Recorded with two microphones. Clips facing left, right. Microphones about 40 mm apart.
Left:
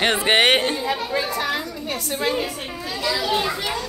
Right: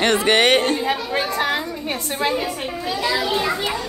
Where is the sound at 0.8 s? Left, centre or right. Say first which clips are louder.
Right 2 dB; right.